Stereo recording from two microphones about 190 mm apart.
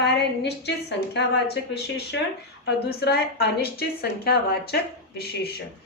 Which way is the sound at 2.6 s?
60° left (ahead or behind).